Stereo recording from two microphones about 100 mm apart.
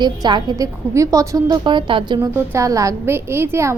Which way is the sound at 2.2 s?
25° right (ahead or behind).